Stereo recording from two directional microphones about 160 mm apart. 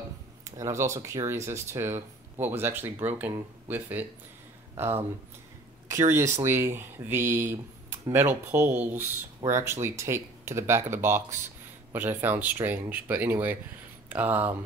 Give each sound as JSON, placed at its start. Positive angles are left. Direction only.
{"t": 0.6, "sound": "speech", "side_deg": -15}